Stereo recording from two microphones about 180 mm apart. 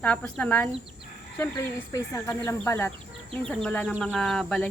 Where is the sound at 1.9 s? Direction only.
15° left (ahead or behind).